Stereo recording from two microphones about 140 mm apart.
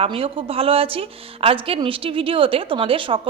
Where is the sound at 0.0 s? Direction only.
40° right (ahead or behind).